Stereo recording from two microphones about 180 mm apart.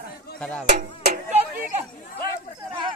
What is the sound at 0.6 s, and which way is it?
Music, 40° right (ahead or behind).